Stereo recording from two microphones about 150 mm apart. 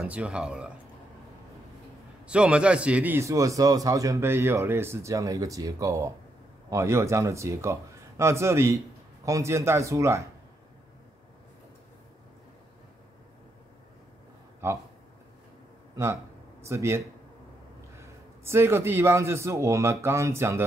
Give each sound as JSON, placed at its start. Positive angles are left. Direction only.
{"t": 0.0, "sound": "speech", "side_deg": -5}
{"t": 2.2, "sound": "a man's voice", "side_deg": -5}
{"t": 16.6, "sound": "a man's voice", "side_deg": -20}